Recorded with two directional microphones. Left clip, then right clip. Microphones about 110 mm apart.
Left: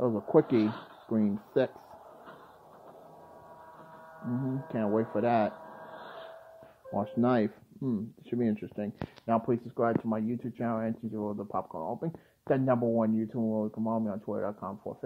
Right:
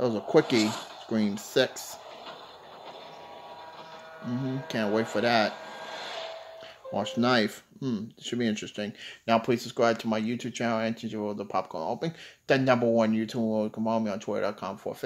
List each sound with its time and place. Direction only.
0.0 s speech: 5° right (ahead or behind)
4.4 s speech: 5° right (ahead or behind)
13.4 s speech: 20° right (ahead or behind)